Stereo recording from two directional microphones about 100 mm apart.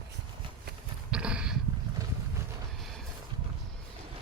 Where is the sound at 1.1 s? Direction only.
10° right (ahead or behind).